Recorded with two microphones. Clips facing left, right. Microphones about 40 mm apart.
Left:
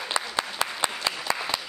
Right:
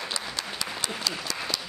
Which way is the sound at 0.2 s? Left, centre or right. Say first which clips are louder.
Left 6 dB; left.